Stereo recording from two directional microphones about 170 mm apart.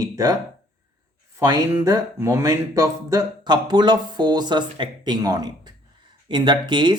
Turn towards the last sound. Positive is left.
turn(degrees=-25)  # may be behind; listen again after turning